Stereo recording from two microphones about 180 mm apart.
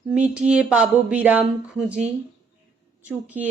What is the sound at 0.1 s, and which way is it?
Speech, 5° right (ahead or behind).